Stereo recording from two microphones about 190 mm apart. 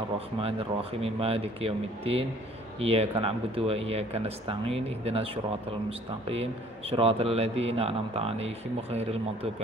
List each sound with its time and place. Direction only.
1.0 s a man's voice: 30° right (ahead or behind)